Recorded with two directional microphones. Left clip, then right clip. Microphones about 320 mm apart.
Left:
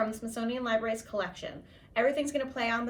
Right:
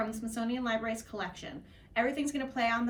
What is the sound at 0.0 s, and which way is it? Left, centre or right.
Speech, centre.